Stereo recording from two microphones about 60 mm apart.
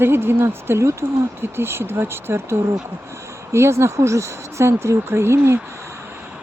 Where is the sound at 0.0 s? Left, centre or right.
Right.